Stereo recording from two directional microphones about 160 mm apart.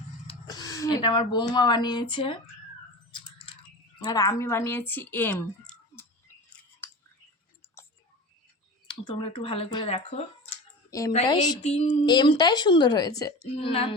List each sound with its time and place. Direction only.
0.4 s speech: 25° left (ahead or behind)
3.1 s a sound: 30° left (ahead or behind)
4.0 s a woman's voice: 20° left (ahead or behind)
8.9 s speech: 35° left (ahead or behind)
10.9 s speech: 20° left (ahead or behind)
11.6 s speech: 45° left (ahead or behind)
12.0 s speech: 25° left (ahead or behind)
13.6 s speech: 35° left (ahead or behind)